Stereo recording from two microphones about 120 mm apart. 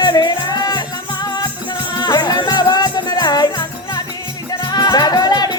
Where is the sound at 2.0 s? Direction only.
35° left (ahead or behind).